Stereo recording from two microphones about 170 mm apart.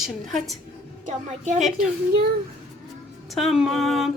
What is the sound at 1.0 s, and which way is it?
Speech, 45° right (ahead or behind).